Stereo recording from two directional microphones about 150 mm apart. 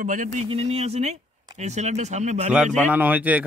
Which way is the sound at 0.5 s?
45° right (ahead or behind).